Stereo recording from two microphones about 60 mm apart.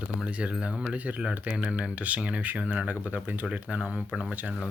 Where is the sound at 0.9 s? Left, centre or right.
Right.